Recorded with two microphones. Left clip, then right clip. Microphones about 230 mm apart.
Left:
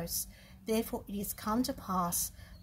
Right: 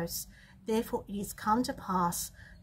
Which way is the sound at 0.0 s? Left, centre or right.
Centre.